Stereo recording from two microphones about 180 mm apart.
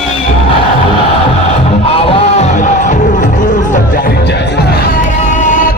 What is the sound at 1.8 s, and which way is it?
Music, 30° left (ahead or behind).